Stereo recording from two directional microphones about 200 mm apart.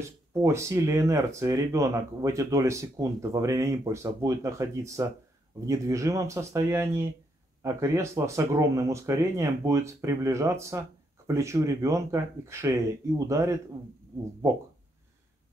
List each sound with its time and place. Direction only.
0.3 s speech: 15° right (ahead or behind)